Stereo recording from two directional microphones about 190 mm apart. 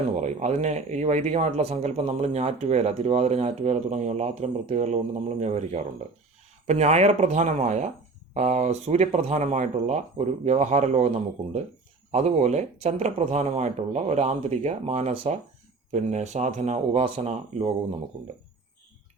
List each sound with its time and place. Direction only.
0.2 s speech: 35° right (ahead or behind)